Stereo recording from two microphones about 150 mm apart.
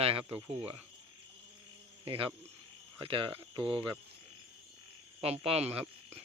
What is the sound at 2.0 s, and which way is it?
Speech, 40° right (ahead or behind).